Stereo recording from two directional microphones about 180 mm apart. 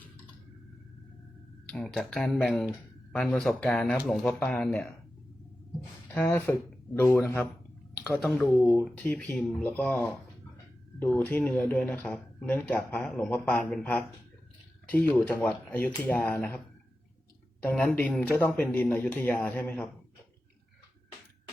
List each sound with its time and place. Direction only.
1.6 s speech: 5° left (ahead or behind)
6.1 s speech: 10° left (ahead or behind)
17.6 s speech: 5° left (ahead or behind)